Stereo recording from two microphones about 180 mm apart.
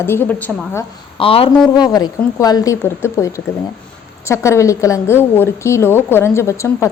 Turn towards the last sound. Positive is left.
turn(degrees=15)  # may be behind; listen again after turning